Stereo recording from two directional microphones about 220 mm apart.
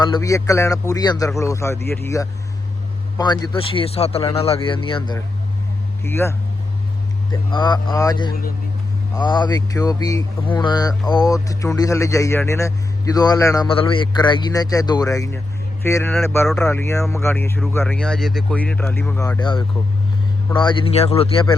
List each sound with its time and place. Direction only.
0.0 s speech: 15° left (ahead or behind)
6.0 s speech: 10° left (ahead or behind)
7.5 s speech: 20° left (ahead or behind)